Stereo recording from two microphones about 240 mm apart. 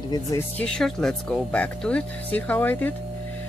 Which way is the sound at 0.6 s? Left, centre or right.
Centre.